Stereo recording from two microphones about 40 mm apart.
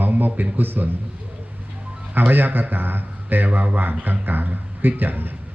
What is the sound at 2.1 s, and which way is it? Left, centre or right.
A man's voice, right.